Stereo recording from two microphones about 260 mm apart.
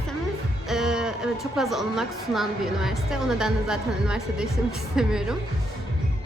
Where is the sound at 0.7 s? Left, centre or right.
Centre.